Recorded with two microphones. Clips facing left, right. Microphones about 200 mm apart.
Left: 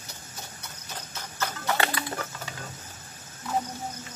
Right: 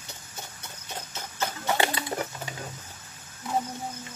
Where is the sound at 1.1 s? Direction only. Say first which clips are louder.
Right 1 dB; 25° right (ahead or behind).